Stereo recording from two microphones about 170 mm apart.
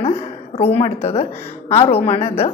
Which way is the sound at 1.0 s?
40° left (ahead or behind).